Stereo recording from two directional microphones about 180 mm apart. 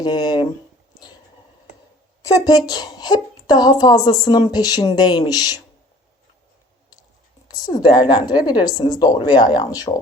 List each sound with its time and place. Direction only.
0.0 s a woman's voice: 25° left (ahead or behind)
2.2 s a woman's voice: 20° left (ahead or behind)
7.5 s a woman's voice: 20° left (ahead or behind)